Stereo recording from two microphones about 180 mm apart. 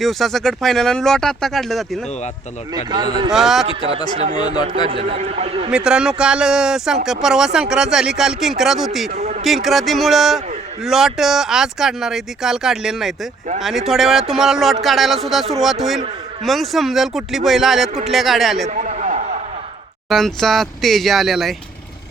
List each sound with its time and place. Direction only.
0.0 s speech: centre (ahead or behind)
2.7 s speech: 25° right (ahead or behind)
3.3 s speech: centre (ahead or behind)
4.2 s a man's voice: 40° right (ahead or behind)
5.7 s speech: 5° right (ahead or behind)
9.1 s a man's voice: 35° right (ahead or behind)
9.4 s speech: centre (ahead or behind)
18.7 s a sound: 45° right (ahead or behind)
20.1 s speech: centre (ahead or behind)